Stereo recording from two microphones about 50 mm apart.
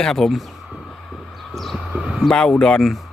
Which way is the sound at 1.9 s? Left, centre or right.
Right.